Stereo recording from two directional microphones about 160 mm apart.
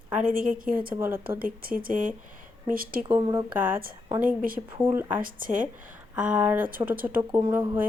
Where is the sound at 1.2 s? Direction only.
65° right (ahead or behind).